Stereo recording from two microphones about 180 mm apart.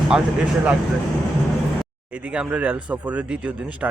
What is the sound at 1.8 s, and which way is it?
Speech, 5° right (ahead or behind).